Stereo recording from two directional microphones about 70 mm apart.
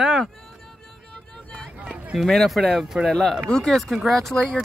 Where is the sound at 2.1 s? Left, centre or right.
Centre.